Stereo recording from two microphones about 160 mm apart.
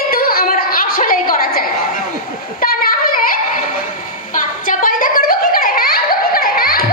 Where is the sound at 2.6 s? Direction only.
65° left (ahead or behind).